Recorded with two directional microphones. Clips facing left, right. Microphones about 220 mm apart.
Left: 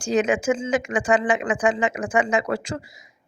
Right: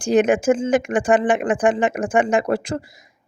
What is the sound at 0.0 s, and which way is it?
Speech, 55° right (ahead or behind).